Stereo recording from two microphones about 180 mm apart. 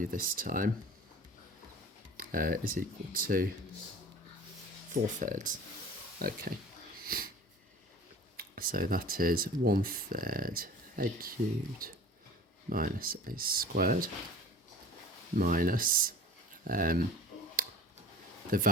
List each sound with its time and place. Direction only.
0.0 s speech: 50° right (ahead or behind)
2.1 s speech: 50° right (ahead or behind)
5.2 s speech: 45° right (ahead or behind)
7.0 s wheeze: 55° right (ahead or behind)
8.4 s speech: 55° right (ahead or behind)
15.4 s speech: 50° right (ahead or behind)
18.5 s speech: 50° right (ahead or behind)